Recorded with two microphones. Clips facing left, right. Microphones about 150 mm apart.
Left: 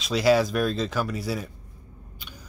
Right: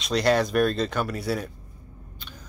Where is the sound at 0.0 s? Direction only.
5° left (ahead or behind).